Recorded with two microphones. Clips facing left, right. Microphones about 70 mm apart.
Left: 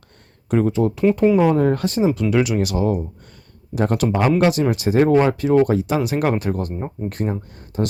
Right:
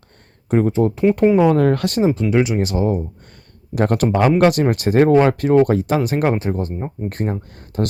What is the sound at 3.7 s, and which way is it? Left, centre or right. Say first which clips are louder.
Speech: right 2 dB; right.